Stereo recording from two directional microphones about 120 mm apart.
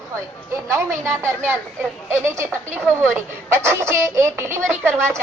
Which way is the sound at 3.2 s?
20° right (ahead or behind).